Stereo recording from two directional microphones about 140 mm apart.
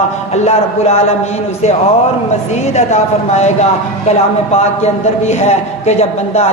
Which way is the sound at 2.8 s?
55° left (ahead or behind).